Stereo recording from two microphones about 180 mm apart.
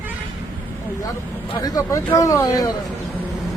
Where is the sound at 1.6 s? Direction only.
20° left (ahead or behind).